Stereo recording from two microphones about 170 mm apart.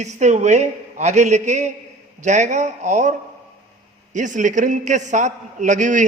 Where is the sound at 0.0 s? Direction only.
45° right (ahead or behind).